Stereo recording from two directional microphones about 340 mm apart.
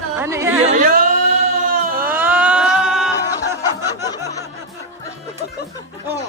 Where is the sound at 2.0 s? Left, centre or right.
Centre.